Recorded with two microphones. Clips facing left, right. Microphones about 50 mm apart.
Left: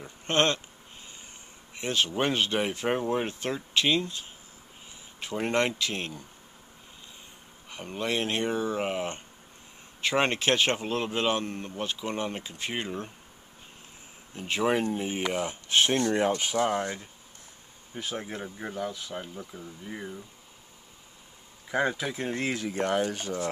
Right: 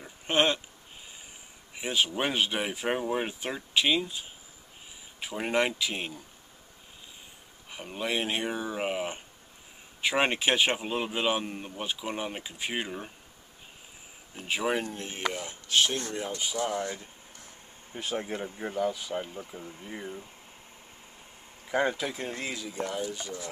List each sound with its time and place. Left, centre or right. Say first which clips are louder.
0.0 s speech: even; centre
1.8 s speech: left 1 dB; centre
7.7 s speech: left 1 dB; centre
14.3 s speech: left 3 dB; centre
15.3 s speech: left 2 dB; left
16.0 s speech: left 8 dB; left
16.5 s speech: left 4 dB; left
17.9 s speech: right 2 dB; centre
21.6 s speech: even; centre
22.5 s speech: left 6 dB; left